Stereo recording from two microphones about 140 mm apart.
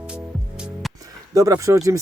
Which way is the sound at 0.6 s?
Centre (ahead or behind).